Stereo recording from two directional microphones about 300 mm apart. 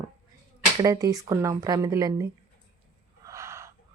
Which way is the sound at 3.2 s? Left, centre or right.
Centre.